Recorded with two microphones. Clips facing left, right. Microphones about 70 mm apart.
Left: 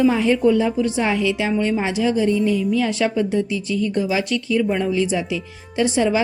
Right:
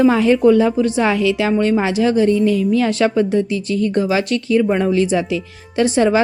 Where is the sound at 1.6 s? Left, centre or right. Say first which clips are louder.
Right 5 dB; right.